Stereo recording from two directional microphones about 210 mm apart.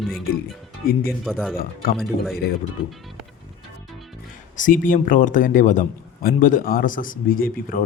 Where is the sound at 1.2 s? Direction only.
Centre (ahead or behind).